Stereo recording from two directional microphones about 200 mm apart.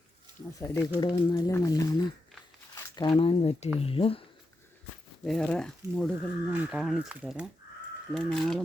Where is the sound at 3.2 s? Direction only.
30° left (ahead or behind).